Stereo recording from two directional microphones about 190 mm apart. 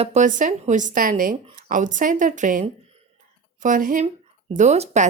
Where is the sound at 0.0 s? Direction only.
40° right (ahead or behind).